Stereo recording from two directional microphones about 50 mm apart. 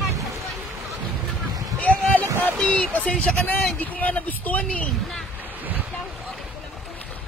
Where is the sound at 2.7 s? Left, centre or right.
Left.